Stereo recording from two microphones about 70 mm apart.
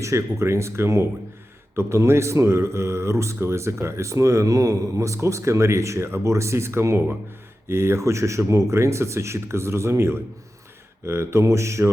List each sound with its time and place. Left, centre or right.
0.0 s speech: right